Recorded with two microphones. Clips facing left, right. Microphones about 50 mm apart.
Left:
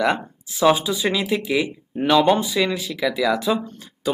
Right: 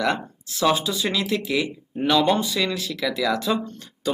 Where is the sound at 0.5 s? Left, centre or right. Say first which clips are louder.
Left 4 dB; centre.